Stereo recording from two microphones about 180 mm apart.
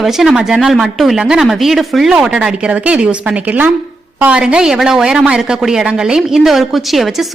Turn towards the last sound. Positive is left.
turn(degrees=0)  # may be behind; listen again after turning